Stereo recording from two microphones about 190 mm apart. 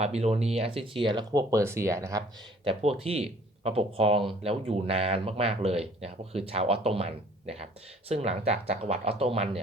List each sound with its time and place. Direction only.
0.0 s speech: 35° right (ahead or behind); by 2.2 s 15° right (ahead or behind)
2.6 s speech: 30° right (ahead or behind)